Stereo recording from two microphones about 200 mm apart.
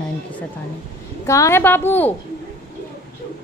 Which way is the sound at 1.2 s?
15° left (ahead or behind).